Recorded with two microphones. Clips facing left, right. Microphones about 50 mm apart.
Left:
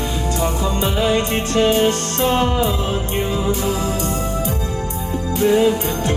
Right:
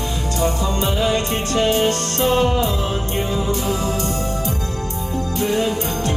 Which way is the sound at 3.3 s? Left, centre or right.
Centre.